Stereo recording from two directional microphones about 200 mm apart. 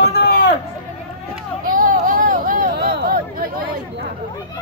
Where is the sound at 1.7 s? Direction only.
45° right (ahead or behind).